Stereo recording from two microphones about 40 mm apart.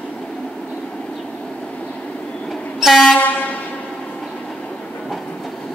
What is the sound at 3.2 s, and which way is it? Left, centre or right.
Vehicle, left.